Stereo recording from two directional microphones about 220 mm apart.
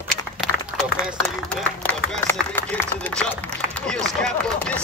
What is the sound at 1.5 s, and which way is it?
Speech, 5° left (ahead or behind).